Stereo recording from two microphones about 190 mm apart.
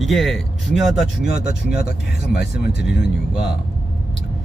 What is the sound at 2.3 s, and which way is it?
Speech, 60° left (ahead or behind).